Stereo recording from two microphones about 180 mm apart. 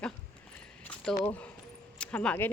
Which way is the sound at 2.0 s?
5° left (ahead or behind).